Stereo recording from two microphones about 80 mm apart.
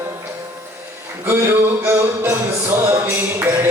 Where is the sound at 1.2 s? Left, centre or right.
Right.